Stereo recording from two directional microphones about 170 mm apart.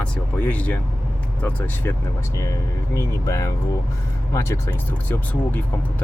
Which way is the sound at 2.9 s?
20° left (ahead or behind).